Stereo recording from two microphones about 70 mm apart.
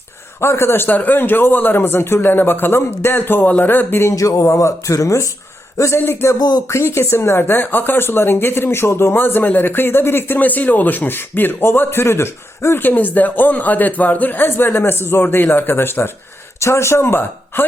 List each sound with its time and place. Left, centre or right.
0.4 s speech: left
4.1 s a sound: left
5.7 s a man's voice: left